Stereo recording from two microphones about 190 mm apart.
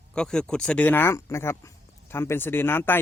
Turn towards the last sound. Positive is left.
turn(degrees=10)  # may be behind; listen again after turning